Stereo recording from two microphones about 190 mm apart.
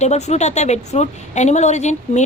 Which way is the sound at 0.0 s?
35° left (ahead or behind).